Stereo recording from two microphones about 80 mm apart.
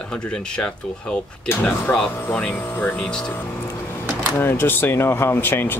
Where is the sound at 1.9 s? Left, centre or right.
Centre.